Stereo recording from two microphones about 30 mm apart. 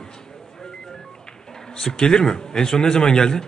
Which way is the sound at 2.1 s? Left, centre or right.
Centre.